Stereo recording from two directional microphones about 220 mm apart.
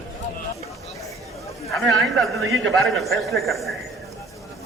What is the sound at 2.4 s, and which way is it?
Speech, 65° right (ahead or behind).